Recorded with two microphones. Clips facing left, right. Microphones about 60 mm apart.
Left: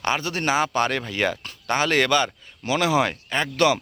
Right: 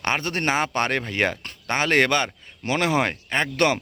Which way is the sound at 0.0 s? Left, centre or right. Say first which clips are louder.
Even; right.